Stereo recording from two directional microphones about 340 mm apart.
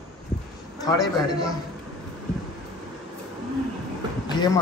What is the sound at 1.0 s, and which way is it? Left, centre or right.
Speech, centre.